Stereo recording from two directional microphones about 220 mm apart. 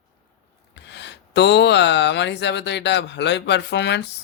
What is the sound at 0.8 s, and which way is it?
Speech, 50° left (ahead or behind).